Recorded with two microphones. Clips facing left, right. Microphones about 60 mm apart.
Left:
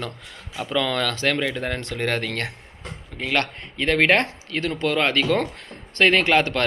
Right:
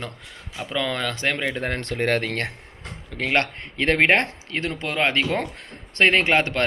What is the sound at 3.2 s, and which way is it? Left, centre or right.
Speech, right.